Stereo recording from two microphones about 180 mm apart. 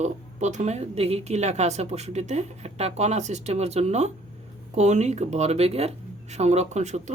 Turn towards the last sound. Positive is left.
turn(degrees=-40)  # may be behind; listen again after turning